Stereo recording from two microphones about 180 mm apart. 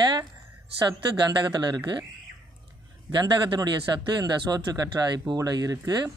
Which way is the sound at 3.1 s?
25° right (ahead or behind).